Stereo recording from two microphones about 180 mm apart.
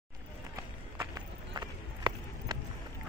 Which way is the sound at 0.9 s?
20° right (ahead or behind).